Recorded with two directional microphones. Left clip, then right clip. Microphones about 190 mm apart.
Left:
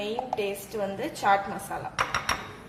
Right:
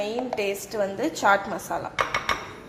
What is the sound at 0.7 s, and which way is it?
Speech, 25° right (ahead or behind).